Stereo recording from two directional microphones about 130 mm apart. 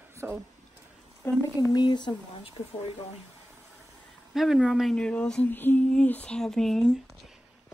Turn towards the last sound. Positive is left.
turn(degrees=0)  # may be behind; listen again after turning